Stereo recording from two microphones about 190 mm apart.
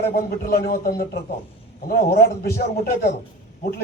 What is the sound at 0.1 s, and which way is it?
A man's voice, 55° left (ahead or behind).